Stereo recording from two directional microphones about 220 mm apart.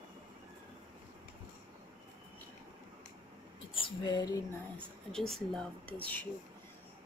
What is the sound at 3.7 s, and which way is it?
Speech, 20° left (ahead or behind).